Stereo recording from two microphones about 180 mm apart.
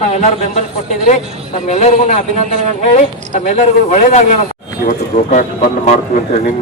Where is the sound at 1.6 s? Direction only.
40° left (ahead or behind).